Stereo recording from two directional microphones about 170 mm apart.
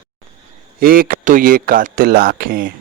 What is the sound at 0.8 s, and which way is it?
A man's voice, 60° right (ahead or behind).